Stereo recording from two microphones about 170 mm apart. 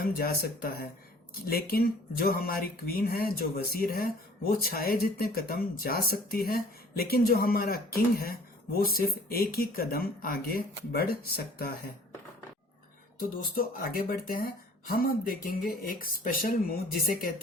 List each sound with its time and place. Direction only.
0.0 s speech: 65° left (ahead or behind)
13.1 s speech: 60° left (ahead or behind)